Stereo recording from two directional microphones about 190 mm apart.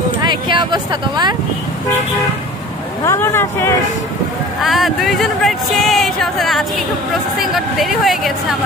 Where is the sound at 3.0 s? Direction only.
15° left (ahead or behind).